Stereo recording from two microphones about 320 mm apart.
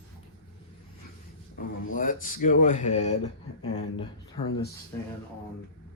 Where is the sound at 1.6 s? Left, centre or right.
Left.